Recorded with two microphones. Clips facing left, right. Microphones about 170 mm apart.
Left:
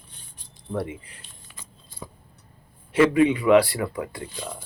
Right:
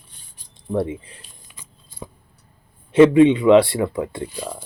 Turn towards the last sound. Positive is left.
turn(degrees=-25)  # may be behind; listen again after turning